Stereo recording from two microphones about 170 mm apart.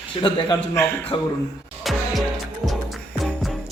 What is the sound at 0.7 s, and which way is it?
Speech, 15° left (ahead or behind).